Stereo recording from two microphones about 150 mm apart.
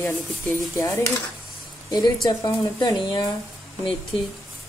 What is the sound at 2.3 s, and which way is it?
Speech, 25° left (ahead or behind).